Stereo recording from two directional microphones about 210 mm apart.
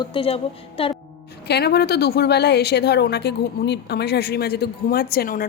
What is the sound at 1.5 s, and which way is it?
A woman's voice, 50° left (ahead or behind).